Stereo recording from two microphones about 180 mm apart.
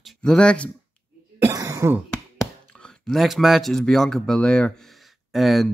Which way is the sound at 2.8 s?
Centre (ahead or behind).